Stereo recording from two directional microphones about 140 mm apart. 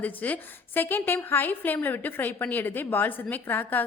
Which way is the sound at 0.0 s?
10° left (ahead or behind).